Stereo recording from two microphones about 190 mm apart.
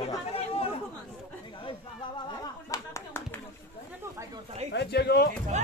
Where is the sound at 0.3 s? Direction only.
30° left (ahead or behind).